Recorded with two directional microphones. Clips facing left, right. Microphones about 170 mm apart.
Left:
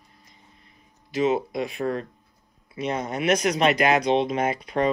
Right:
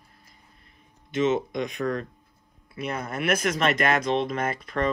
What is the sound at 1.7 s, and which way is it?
Speech, 35° left (ahead or behind).